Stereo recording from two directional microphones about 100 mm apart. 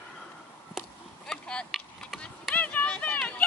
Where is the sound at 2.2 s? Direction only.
10° left (ahead or behind).